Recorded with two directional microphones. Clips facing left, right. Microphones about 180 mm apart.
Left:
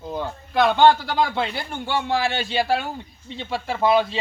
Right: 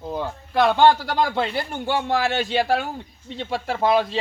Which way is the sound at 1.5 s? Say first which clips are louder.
Right 3 dB; 40° right (ahead or behind).